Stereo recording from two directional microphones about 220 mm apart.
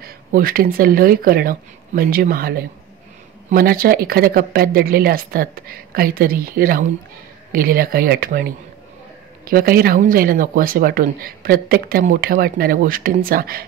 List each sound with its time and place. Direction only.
0.0 s speech: 40° right (ahead or behind)